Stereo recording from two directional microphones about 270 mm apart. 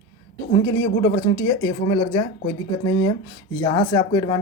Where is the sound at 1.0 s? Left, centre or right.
Centre.